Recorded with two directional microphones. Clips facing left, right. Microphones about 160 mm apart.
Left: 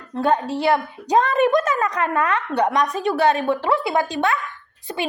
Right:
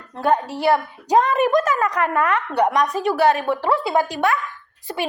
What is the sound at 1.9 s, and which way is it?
A child's voice, 25° left (ahead or behind).